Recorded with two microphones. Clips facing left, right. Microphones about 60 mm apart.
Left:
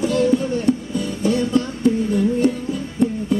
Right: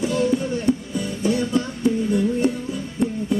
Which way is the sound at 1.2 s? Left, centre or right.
Centre.